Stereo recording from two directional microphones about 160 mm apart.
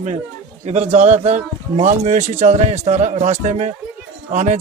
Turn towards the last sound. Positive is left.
turn(degrees=-50)  # may be behind; listen again after turning